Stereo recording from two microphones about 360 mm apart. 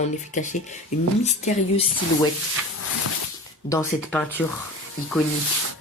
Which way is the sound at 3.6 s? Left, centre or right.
Centre.